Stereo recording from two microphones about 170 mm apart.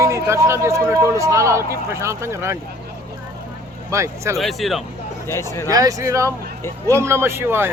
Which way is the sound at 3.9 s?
15° right (ahead or behind).